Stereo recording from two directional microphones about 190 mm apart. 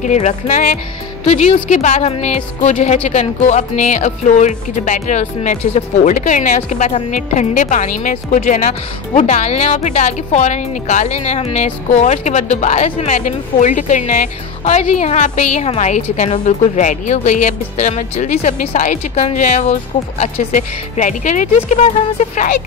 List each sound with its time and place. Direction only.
0.0 s speech: 40° left (ahead or behind)